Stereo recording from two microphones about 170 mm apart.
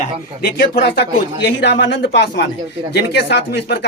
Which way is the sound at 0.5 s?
75° left (ahead or behind).